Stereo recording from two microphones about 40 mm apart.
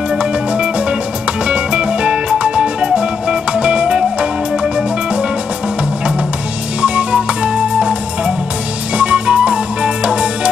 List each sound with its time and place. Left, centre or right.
0.2 s music: right
6.8 s music: right
8.9 s music: right